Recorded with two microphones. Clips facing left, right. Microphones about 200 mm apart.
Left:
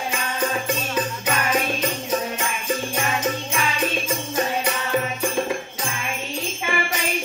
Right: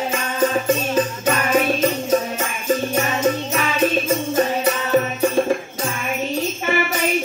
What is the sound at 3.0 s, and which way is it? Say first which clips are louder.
Music: right 5 dB; 40° right (ahead or behind).